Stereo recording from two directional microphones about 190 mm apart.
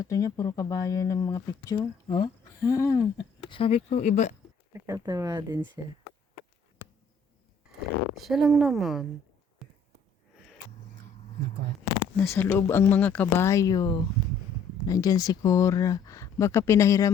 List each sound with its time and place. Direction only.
0.0 s speech: 15° left (ahead or behind)
3.5 s speech: 30° left (ahead or behind)
4.7 s speech: 15° right (ahead or behind)
8.2 s speech: centre (ahead or behind)
12.1 s speech: 10° left (ahead or behind)